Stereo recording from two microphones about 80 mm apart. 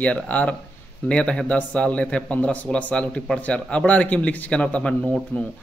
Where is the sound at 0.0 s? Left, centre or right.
Centre.